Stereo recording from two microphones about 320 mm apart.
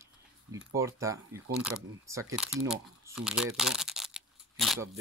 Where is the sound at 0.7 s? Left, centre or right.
Centre.